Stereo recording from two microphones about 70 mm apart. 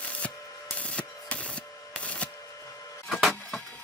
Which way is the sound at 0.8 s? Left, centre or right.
Centre.